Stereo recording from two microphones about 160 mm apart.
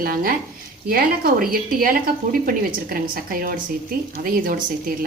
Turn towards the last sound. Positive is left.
turn(degrees=-65)  # may be behind; listen again after turning